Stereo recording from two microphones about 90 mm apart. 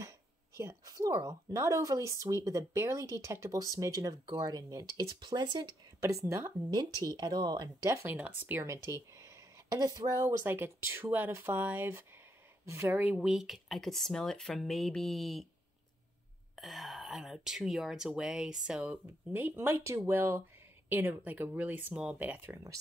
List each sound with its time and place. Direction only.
0.8 s speech: 45° right (ahead or behind)
3.7 s speech: 40° right (ahead or behind)
5.2 s speech: 55° right (ahead or behind)
5.9 s speech: 35° right (ahead or behind)
6.7 s speech: 50° right (ahead or behind)
7.8 s speech: 35° right (ahead or behind)
8.1 s speech: 20° right (ahead or behind)
8.6 s speech: 30° right (ahead or behind)
10.4 s speech: 25° right (ahead or behind)
13.0 s speech: 10° right (ahead or behind)
16.5 s speech: centre (ahead or behind); by 22.6 s 20° right (ahead or behind)